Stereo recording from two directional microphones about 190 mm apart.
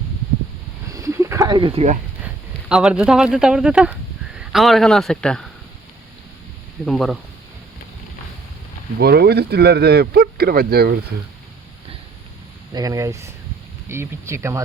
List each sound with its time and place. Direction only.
0.9 s a sound: 15° right (ahead or behind); by 2.0 s 35° right (ahead or behind)
2.2 s speech: 5° right (ahead or behind)
6.8 s speech: centre (ahead or behind)
9.0 s speech: 55° right (ahead or behind)
12.7 s speech: 20° right (ahead or behind)